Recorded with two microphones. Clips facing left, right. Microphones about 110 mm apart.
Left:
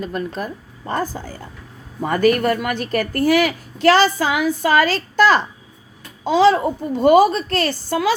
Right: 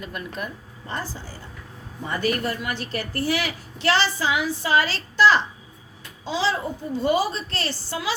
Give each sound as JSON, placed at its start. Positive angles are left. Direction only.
{"t": 0.0, "sound": "speech", "side_deg": 35}
{"t": 0.9, "sound": "a woman's voice", "side_deg": 50}